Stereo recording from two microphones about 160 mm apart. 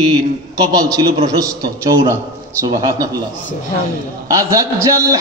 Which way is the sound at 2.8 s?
20° right (ahead or behind).